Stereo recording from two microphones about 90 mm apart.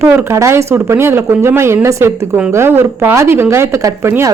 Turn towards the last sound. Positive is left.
turn(degrees=-35)  # may be behind; listen again after turning